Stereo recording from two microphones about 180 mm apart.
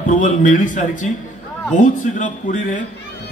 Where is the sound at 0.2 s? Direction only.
45° left (ahead or behind).